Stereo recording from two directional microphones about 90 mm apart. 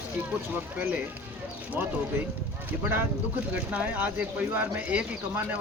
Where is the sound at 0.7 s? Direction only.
20° right (ahead or behind).